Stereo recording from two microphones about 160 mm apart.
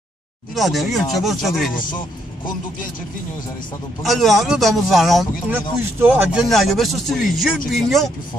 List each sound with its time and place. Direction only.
0.6 s speech: centre (ahead or behind)
1.8 s a man's voice: 30° left (ahead or behind)
4.0 s speech: centre (ahead or behind)
5.5 s speech: 15° right (ahead or behind)
6.5 s speech: centre (ahead or behind)